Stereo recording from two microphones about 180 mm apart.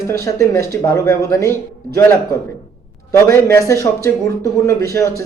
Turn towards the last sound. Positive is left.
turn(degrees=15)  # may be behind; listen again after turning